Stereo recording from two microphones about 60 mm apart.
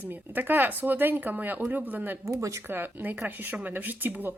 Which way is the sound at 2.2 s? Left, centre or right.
Right.